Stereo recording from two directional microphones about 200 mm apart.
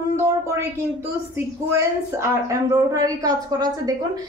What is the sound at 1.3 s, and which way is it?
A woman's voice, 15° right (ahead or behind).